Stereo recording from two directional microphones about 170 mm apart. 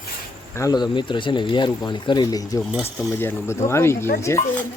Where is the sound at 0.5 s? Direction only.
20° left (ahead or behind).